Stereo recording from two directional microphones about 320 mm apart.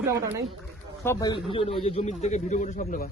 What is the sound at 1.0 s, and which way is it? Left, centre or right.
A man's voice, centre.